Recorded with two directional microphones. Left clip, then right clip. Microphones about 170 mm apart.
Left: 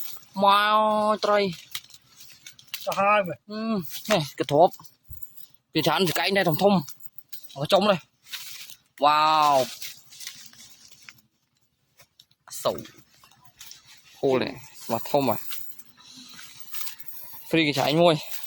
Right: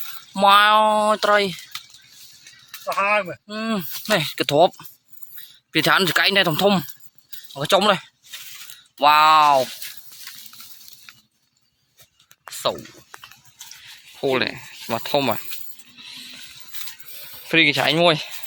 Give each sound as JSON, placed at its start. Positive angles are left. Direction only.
{"t": 0.3, "sound": "speech", "side_deg": 0}
{"t": 2.8, "sound": "speech", "side_deg": 40}
{"t": 3.4, "sound": "speech", "side_deg": 0}
{"t": 12.6, "sound": "speech", "side_deg": 5}
{"t": 14.2, "sound": "speech", "side_deg": 5}
{"t": 17.5, "sound": "speech", "side_deg": 5}